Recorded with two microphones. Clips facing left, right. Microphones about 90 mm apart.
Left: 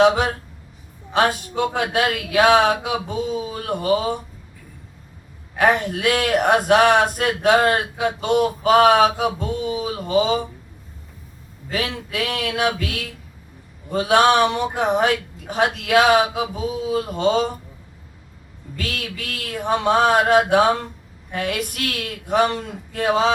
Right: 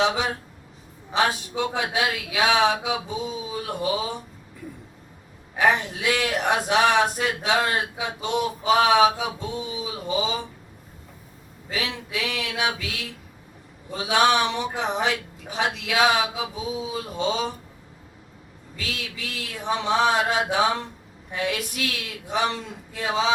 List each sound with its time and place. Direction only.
1.1 s a man's voice: 50° left (ahead or behind)
5.5 s a man's voice: 55° left (ahead or behind)
11.7 s a man's voice: 50° left (ahead or behind)
13.9 s a man's voice: 55° left (ahead or behind)
18.8 s a man's voice: 55° left (ahead or behind)